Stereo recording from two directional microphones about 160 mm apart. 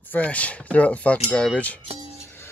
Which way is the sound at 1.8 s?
40° right (ahead or behind).